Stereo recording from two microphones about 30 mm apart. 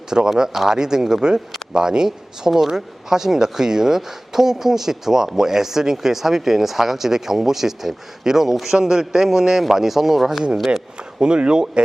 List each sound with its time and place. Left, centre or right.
0.3 s speech: centre
2.0 s speech: centre
11.2 s speech: right